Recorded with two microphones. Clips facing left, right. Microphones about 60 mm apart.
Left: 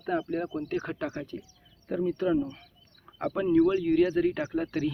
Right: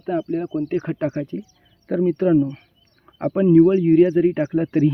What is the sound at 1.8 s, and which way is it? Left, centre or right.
Speech, right.